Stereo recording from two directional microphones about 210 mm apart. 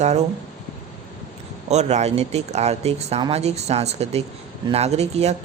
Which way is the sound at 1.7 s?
30° right (ahead or behind).